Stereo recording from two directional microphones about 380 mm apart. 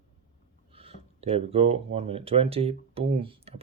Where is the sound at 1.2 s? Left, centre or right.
Centre.